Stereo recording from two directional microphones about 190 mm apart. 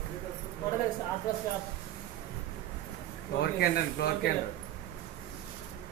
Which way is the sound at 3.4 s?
55° left (ahead or behind).